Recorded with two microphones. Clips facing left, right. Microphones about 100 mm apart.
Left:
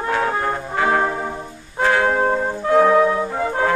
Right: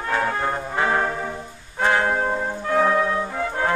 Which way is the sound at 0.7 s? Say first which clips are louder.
Left 4 dB; 20° right (ahead or behind).